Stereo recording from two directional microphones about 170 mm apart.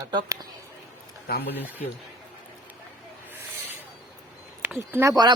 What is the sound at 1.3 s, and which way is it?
Speech, 75° left (ahead or behind).